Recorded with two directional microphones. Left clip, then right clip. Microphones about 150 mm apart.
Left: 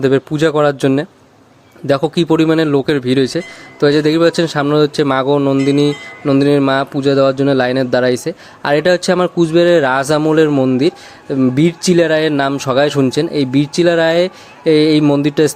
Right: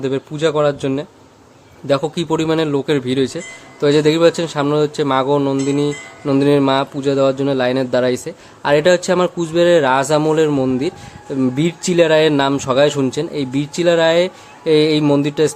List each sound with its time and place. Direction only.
0.0 s speech: 45° left (ahead or behind)
5.4 s mantra: 20° left (ahead or behind)
5.6 s speech: 35° left (ahead or behind)
10.5 s mantra: 20° left (ahead or behind)
10.8 s speech: 35° left (ahead or behind)